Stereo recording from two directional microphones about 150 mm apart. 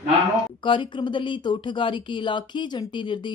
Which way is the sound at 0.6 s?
35° left (ahead or behind).